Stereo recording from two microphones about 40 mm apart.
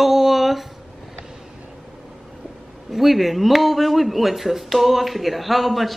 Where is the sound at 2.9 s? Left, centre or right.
Centre.